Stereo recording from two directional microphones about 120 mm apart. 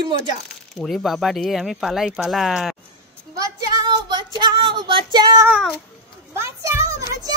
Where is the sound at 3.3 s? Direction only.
35° right (ahead or behind).